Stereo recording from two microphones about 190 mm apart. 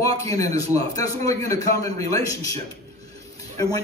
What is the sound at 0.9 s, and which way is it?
A man's voice, 15° left (ahead or behind).